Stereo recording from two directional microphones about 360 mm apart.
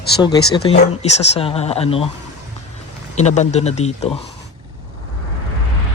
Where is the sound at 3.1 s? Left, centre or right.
Centre.